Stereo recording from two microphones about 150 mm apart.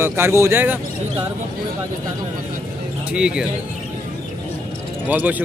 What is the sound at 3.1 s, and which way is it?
Speech, 5° right (ahead or behind).